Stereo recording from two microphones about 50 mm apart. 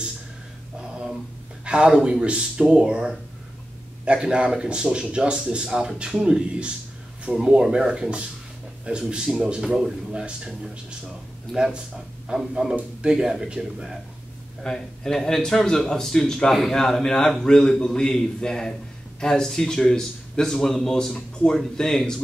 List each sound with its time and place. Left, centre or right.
0.7 s a sound: centre
1.6 s a man's voice: centre
14.6 s a man's voice: centre